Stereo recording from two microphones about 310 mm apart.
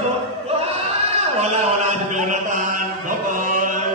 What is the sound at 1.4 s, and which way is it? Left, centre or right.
Mantra, right.